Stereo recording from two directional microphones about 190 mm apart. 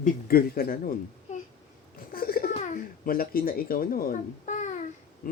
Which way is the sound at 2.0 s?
50° left (ahead or behind).